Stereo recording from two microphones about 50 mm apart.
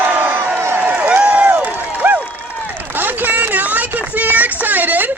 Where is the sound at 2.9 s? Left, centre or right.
Right.